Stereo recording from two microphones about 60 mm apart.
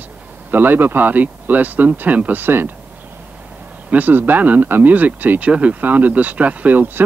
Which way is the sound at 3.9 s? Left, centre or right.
Right.